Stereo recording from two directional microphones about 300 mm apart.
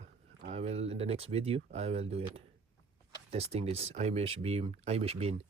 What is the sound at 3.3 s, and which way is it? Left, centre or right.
Speech, right.